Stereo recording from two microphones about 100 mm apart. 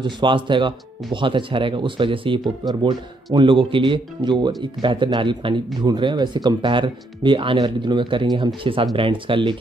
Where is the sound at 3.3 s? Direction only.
55° right (ahead or behind).